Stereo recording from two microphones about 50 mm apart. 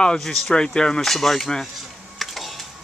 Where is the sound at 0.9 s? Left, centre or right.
Centre.